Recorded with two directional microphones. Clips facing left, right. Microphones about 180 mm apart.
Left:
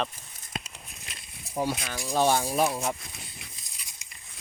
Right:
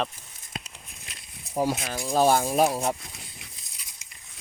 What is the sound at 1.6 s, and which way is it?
Speech, 40° right (ahead or behind).